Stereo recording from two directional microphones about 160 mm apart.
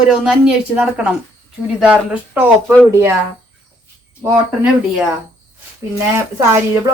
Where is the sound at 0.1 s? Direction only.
5° right (ahead or behind).